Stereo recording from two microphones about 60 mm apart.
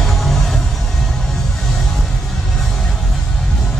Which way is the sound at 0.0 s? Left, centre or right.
Centre.